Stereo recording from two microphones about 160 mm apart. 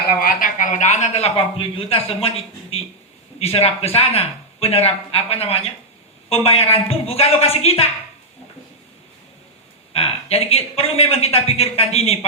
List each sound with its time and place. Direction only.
0.0 s speech: 70° left (ahead or behind); by 7.9 s 40° left (ahead or behind)
9.9 s speech: 35° left (ahead or behind)